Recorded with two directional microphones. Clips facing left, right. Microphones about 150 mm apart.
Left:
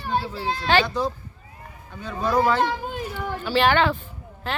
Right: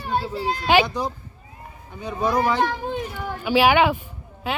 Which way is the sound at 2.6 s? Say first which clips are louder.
Right 1 dB; centre (ahead or behind).